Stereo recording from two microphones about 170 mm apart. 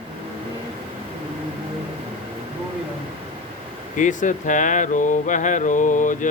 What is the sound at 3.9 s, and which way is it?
Speech, 50° left (ahead or behind).